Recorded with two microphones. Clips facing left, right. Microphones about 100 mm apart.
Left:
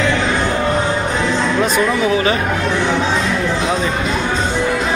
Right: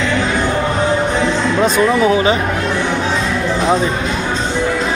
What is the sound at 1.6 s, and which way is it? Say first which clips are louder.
Speech: right 5 dB; 25° right (ahead or behind).